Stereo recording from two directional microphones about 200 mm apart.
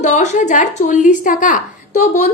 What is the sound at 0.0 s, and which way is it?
A woman's voice, 35° left (ahead or behind).